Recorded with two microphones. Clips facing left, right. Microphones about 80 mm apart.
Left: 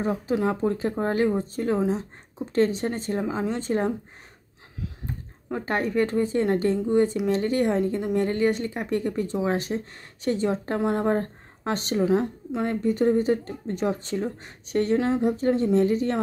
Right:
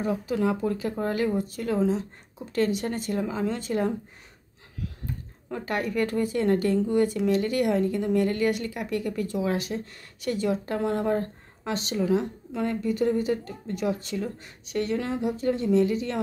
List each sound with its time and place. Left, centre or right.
0.0 s a woman's voice: left
5.0 s a woman's voice: left
11.1 s speech: left
12.1 s a woman's voice: left
15.0 s speech: left
15.2 s a woman's voice: left